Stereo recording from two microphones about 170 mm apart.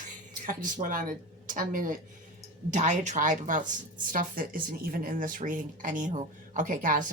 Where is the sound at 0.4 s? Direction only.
55° right (ahead or behind).